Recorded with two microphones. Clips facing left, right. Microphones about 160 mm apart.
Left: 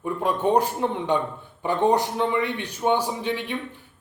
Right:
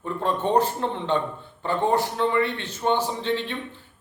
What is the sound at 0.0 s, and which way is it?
A man's voice, 10° left (ahead or behind).